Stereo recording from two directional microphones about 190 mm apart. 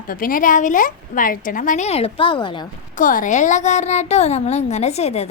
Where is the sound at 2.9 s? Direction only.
45° left (ahead or behind).